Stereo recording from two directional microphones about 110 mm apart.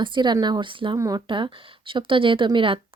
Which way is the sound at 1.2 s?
50° right (ahead or behind).